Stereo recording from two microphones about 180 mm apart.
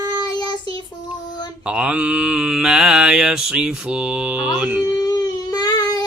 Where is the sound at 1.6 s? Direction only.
5° right (ahead or behind).